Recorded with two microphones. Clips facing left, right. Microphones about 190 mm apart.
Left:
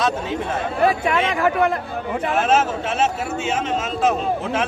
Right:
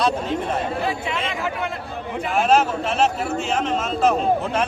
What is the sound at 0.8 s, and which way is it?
Speech, 60° left (ahead or behind).